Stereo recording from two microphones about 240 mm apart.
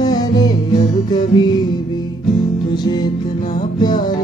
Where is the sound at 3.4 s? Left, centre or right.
Left.